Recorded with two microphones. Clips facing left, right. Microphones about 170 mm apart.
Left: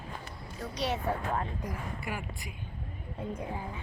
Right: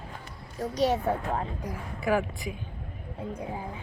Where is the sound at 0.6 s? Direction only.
40° right (ahead or behind).